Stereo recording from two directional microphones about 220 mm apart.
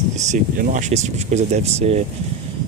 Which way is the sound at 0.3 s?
35° right (ahead or behind).